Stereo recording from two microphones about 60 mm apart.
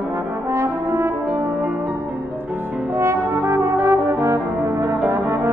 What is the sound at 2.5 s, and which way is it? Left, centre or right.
Music, right.